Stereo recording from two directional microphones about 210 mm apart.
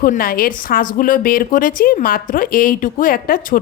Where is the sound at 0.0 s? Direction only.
45° left (ahead or behind).